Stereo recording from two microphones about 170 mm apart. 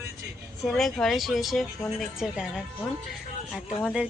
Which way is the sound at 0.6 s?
Centre (ahead or behind).